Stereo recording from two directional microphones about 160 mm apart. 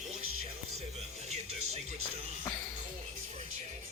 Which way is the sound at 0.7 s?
45° right (ahead or behind).